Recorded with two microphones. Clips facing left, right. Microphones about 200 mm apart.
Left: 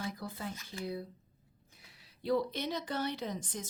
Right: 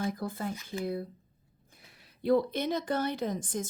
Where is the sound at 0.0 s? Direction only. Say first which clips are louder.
Right 7 dB; 50° right (ahead or behind).